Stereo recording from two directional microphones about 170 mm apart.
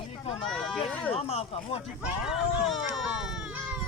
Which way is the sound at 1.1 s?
35° left (ahead or behind).